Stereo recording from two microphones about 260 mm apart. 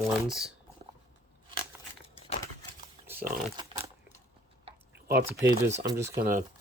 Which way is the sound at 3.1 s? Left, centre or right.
Centre.